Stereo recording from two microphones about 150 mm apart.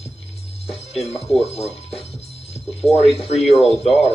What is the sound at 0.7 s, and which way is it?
Speech, 45° left (ahead or behind).